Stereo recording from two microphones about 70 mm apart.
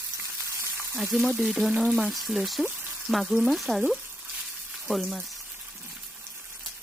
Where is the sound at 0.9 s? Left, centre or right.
Centre.